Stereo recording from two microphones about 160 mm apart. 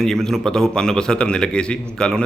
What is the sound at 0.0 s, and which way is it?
A man's voice, 5° left (ahead or behind).